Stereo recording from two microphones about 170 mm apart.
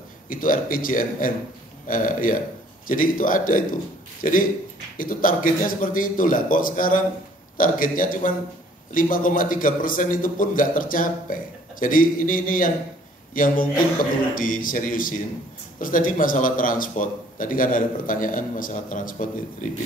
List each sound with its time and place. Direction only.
0.3 s a man's voice: 55° left (ahead or behind)